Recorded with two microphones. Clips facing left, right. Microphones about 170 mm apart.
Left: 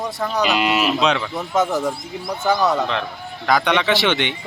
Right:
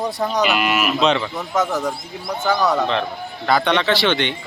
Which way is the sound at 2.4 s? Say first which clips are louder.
Even; 5° left (ahead or behind).